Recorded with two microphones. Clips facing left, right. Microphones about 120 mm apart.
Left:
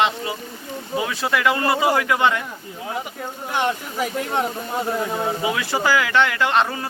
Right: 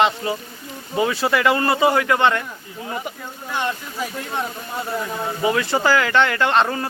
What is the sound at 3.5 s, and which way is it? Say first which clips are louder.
Speech: left 2 dB; 15° left (ahead or behind).